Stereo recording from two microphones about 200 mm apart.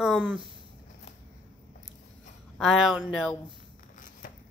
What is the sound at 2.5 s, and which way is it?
Female singing, centre (ahead or behind).